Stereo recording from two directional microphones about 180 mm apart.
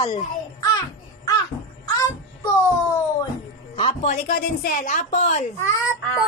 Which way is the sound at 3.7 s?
35° left (ahead or behind).